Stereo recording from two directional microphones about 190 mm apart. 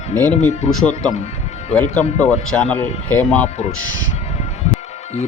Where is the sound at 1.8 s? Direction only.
40° left (ahead or behind).